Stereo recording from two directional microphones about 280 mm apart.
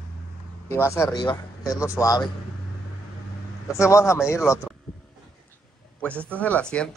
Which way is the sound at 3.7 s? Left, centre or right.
Centre.